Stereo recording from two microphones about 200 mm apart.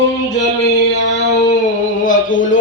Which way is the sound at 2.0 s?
40° left (ahead or behind).